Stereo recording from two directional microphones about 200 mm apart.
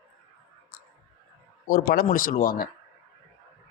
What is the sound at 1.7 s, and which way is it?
Speech, 45° left (ahead or behind).